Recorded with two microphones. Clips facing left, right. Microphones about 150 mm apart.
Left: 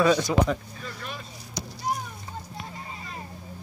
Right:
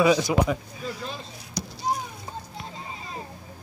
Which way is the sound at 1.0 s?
30° right (ahead or behind).